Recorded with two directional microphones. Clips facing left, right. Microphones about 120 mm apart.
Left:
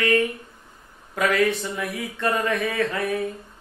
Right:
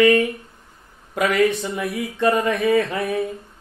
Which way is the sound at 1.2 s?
15° right (ahead or behind).